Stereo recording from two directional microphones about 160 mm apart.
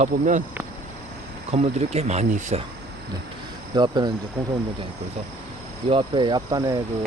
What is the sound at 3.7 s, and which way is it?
Speech, 25° right (ahead or behind).